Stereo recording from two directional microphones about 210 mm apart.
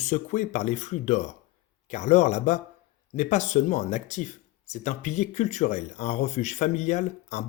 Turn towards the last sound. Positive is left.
turn(degrees=35)  # may be behind; listen again after turning